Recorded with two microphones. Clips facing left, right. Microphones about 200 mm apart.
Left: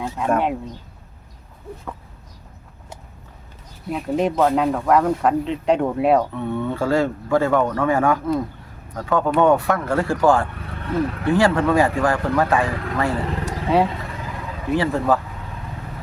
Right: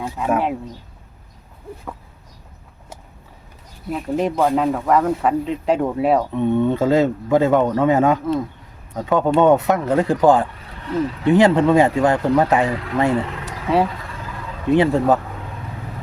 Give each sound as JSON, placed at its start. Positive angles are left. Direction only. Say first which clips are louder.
{"t": 0.0, "sound": "speech", "louder": "even", "side_deg": -5}
{"t": 3.8, "sound": "speech", "louder": "even", "side_deg": 0}
{"t": 6.3, "sound": "speech", "louder": "right 7 dB", "side_deg": -20}
{"t": 13.4, "sound": "vehicle", "louder": "left 3 dB", "side_deg": 0}
{"t": 14.7, "sound": "speech", "louder": "right 4 dB", "side_deg": -20}